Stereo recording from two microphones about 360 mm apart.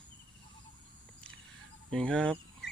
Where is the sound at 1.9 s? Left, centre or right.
Centre.